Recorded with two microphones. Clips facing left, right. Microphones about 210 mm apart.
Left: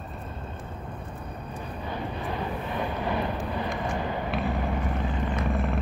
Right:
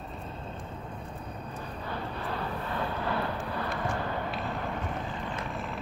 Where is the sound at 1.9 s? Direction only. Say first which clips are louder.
Left 3 dB; 15° left (ahead or behind).